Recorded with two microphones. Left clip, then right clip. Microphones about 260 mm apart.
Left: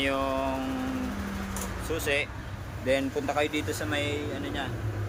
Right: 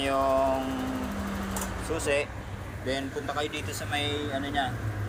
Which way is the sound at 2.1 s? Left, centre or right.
Centre.